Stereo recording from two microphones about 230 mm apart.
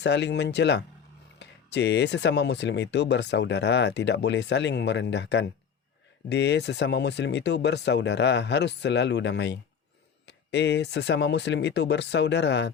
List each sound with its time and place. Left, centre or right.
0.0 s speech: left